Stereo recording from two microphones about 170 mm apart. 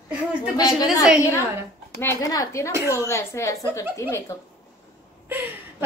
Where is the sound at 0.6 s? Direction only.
20° left (ahead or behind).